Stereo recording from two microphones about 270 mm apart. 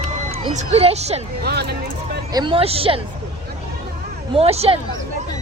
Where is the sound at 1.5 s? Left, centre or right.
Right.